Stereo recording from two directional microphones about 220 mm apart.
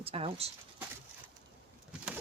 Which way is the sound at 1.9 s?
5° right (ahead or behind).